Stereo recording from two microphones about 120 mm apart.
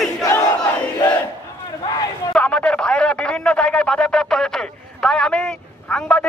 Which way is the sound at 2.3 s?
10° left (ahead or behind).